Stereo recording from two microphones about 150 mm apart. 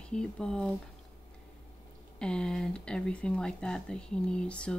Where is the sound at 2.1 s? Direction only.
5° left (ahead or behind).